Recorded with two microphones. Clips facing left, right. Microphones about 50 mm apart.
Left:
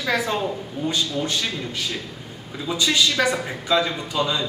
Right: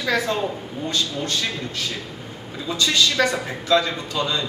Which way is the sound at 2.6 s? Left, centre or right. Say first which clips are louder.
Even; centre.